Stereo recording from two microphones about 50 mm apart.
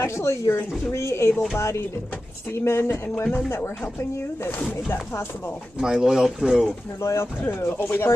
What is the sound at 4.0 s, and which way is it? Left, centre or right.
A woman's voice, left.